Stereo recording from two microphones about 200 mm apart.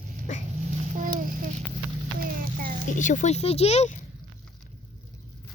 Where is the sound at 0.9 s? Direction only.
45° right (ahead or behind).